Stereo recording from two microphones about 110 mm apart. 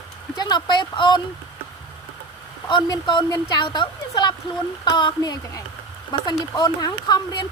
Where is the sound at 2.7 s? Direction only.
45° left (ahead or behind).